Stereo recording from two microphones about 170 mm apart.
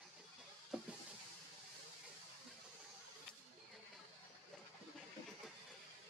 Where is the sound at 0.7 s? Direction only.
5° right (ahead or behind).